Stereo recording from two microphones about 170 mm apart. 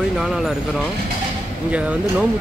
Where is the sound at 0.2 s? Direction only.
Centre (ahead or behind).